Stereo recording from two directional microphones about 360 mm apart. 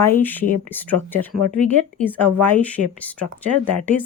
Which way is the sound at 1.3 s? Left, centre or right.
Right.